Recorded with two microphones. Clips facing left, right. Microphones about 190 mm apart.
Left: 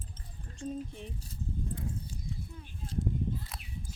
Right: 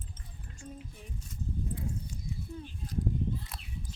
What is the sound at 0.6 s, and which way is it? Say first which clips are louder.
Speech: left 9 dB; 30° left (ahead or behind).